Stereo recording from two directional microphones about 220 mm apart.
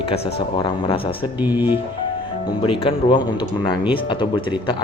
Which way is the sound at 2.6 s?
25° left (ahead or behind).